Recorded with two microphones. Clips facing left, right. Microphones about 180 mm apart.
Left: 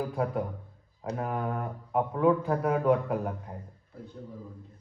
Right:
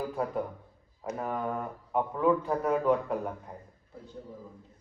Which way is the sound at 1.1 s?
Centre (ahead or behind).